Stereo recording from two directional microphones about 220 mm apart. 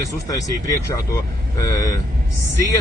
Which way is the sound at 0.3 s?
15° left (ahead or behind).